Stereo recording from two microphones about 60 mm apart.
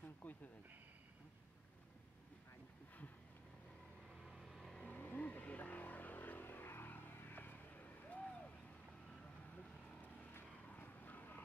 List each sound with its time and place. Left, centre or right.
0.0 s a sound: left
4.1 s vehicle: centre
4.8 s vehicle: left
10.4 s vehicle: left